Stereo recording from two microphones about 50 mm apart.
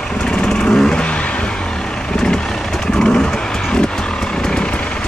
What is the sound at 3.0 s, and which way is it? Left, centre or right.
Vehicle, centre.